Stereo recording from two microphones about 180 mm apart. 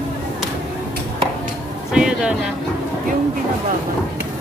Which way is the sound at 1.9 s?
5° right (ahead or behind).